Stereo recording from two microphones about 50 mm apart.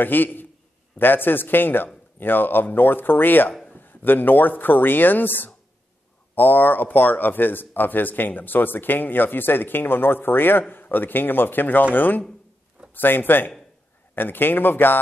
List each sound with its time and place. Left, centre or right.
0.0 s a man's voice: left